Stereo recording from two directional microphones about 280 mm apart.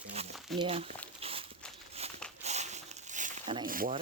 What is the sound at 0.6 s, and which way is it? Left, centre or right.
Speech, right.